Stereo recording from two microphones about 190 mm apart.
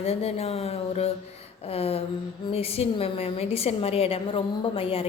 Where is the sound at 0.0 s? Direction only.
30° left (ahead or behind).